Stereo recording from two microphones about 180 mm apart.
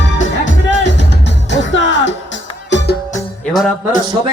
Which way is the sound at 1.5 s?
90° left.